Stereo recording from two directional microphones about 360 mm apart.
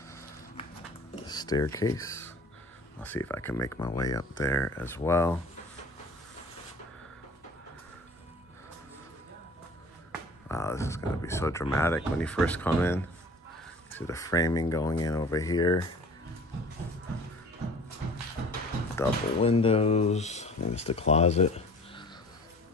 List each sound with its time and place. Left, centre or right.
1.2 s speech: centre
10.5 s speech: centre
18.9 s speech: centre